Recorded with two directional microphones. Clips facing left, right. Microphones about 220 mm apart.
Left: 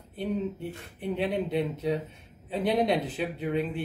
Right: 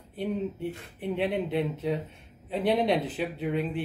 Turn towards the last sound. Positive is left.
turn(degrees=0)  # may be behind; listen again after turning